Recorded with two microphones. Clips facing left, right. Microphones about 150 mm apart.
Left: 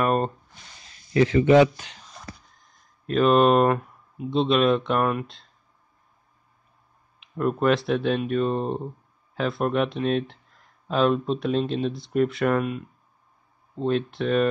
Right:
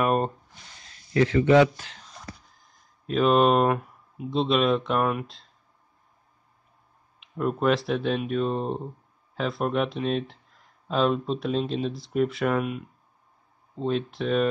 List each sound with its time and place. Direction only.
0.0 s a sound: 5° right (ahead or behind)
1.1 s speech: 15° left (ahead or behind)
3.1 s speech: centre (ahead or behind)
7.2 s speech: centre (ahead or behind)